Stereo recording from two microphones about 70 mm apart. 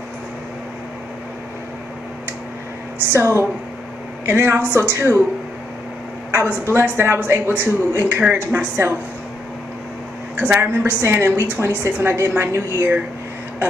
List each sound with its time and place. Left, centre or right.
3.1 s speech: right
6.3 s speech: right
8.3 s a woman's voice: right
10.4 s a woman's voice: right
10.7 s speech: right